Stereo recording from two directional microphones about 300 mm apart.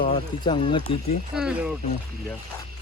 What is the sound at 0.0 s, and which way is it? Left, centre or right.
Speech, centre.